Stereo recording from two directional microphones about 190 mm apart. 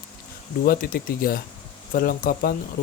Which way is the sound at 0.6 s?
50° left (ahead or behind).